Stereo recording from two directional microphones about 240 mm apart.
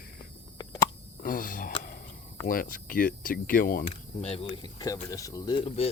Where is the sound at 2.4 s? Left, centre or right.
Left.